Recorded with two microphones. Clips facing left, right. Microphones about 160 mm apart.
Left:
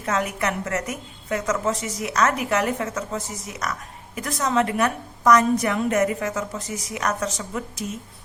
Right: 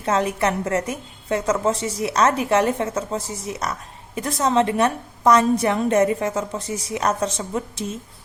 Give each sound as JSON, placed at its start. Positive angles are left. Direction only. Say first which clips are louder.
{"t": 0.0, "sound": "a woman's voice", "louder": "right 4 dB", "side_deg": -30}